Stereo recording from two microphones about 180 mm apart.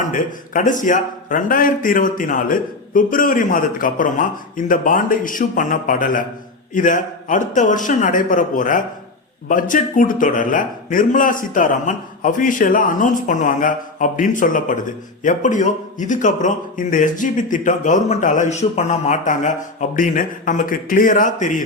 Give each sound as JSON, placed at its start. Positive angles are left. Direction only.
{"t": 0.0, "sound": "a man's voice", "side_deg": 45}